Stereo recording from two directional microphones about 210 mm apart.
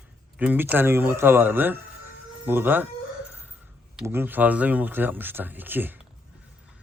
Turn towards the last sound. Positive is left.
turn(degrees=-10)  # may be behind; listen again after turning